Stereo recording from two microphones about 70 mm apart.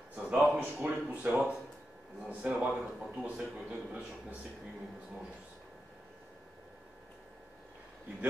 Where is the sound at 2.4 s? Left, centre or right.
Centre.